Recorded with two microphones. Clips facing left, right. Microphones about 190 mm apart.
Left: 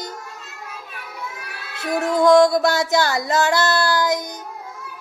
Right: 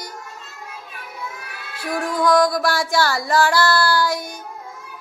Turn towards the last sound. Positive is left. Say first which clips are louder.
# even
turn(degrees=20)  # may be behind; listen again after turning